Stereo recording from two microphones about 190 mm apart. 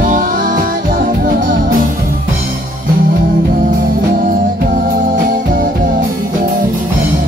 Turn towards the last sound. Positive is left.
turn(degrees=-45)  # may be behind; listen again after turning